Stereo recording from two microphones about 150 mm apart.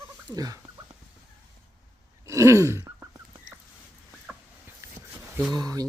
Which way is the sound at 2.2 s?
20° right (ahead or behind).